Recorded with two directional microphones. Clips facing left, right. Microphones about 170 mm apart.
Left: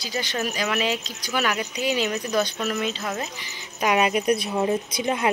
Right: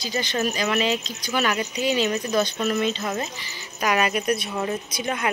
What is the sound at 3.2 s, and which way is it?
Speech, 15° left (ahead or behind).